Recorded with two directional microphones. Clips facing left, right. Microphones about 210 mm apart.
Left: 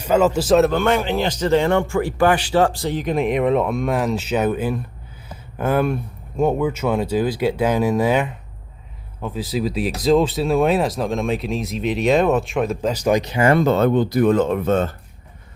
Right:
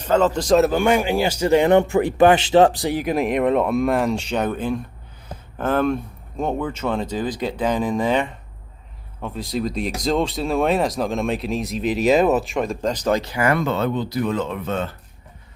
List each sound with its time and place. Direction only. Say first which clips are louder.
0.0 s speech: left 2 dB; 10° left (ahead or behind)
0.8 s speech: right 1 dB; 10° right (ahead or behind); by 13.7 s 30° left (ahead or behind)
13.7 s speech: left 6 dB; 50° left (ahead or behind)